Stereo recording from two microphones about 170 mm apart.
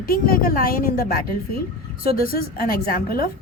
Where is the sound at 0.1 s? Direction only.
60° left (ahead or behind).